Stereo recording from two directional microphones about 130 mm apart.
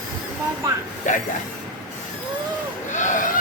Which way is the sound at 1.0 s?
75° left (ahead or behind).